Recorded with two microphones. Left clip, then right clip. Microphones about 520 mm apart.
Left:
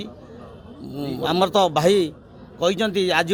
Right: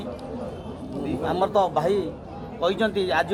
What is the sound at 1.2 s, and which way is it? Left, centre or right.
A man's voice, left.